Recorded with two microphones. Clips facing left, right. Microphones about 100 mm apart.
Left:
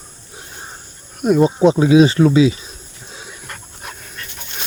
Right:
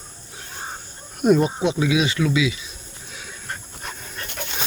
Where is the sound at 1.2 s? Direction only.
Centre (ahead or behind).